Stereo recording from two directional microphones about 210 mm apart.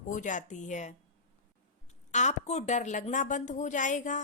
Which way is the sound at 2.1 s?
35° left (ahead or behind).